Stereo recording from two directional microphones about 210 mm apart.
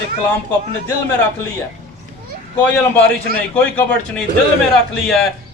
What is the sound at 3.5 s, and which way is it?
A man's voice, 5° left (ahead or behind).